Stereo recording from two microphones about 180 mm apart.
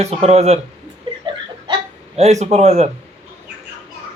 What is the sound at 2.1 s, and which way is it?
Speech, 35° right (ahead or behind).